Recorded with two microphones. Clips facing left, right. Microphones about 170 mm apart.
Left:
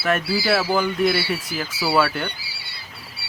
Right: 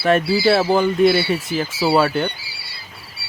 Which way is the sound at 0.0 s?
25° right (ahead or behind).